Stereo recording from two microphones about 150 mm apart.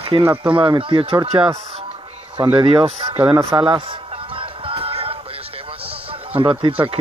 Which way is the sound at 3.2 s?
30° right (ahead or behind).